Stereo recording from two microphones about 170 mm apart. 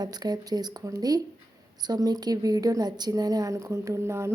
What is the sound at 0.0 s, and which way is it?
A woman's voice, 25° right (ahead or behind).